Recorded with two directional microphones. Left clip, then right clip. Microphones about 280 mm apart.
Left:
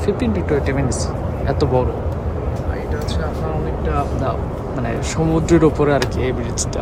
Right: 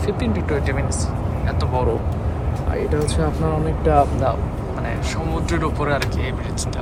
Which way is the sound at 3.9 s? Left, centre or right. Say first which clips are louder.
Right 6 dB; centre.